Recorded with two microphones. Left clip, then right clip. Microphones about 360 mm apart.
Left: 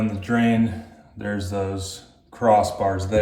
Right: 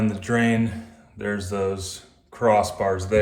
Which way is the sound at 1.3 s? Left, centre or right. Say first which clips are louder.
Right 1 dB; right.